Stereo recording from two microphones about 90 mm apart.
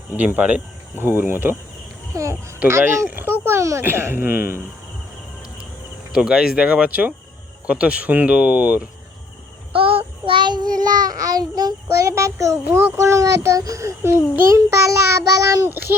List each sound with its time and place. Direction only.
0.2 s a child's voice: 20° right (ahead or behind)
2.1 s child singing: 35° right (ahead or behind)
2.6 s a child's voice: 30° right (ahead or behind)
6.1 s speech: 5° right (ahead or behind)
9.7 s child singing: 90° right; by 16.0 s 25° right (ahead or behind)